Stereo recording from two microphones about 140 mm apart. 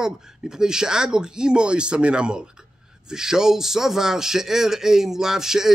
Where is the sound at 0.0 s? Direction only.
5° right (ahead or behind).